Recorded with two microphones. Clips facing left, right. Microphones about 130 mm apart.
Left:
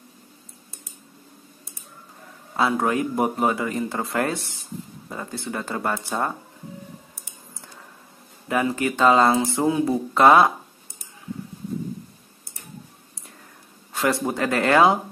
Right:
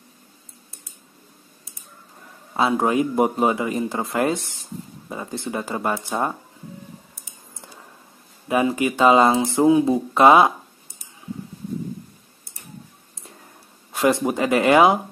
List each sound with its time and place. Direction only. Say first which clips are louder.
2.5 s a man's voice: right 2 dB; 20° right (ahead or behind)
8.5 s speech: right 3 dB; 15° right (ahead or behind)
13.9 s speech: right 4 dB; 20° right (ahead or behind)